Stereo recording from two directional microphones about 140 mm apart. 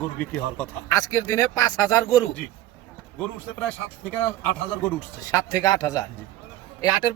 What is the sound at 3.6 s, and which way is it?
Speech, 10° left (ahead or behind).